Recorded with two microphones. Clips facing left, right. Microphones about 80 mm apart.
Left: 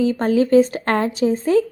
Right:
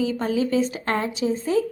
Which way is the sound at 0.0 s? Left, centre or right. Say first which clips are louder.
Left 6 dB; left.